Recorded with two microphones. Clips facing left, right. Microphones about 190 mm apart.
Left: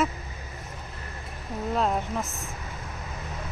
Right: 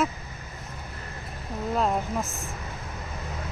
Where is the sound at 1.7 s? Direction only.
5° right (ahead or behind).